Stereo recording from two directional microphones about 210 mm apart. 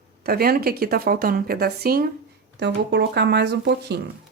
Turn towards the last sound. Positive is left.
turn(degrees=-55)  # may be behind; listen again after turning